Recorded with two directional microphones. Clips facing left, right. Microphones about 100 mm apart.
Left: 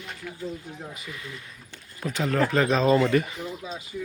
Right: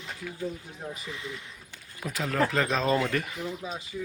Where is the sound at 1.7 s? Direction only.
5° right (ahead or behind).